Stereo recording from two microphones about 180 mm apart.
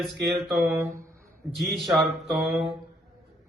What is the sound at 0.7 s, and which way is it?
Speech, 15° right (ahead or behind).